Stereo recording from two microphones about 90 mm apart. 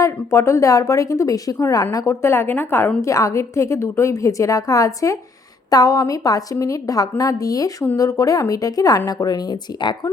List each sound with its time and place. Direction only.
0.0 s a woman's voice: 30° left (ahead or behind)
3.0 s a woman's voice: 35° left (ahead or behind)